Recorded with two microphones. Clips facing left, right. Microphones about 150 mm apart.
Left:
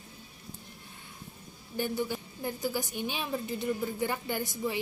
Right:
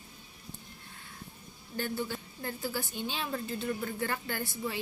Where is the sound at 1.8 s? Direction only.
15° left (ahead or behind).